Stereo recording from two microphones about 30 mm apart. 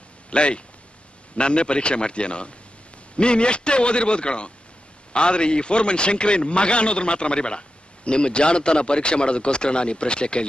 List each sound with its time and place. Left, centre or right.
0.3 s a man's voice: left